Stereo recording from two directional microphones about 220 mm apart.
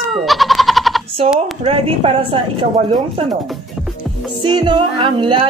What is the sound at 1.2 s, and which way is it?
A woman's voice, 25° right (ahead or behind).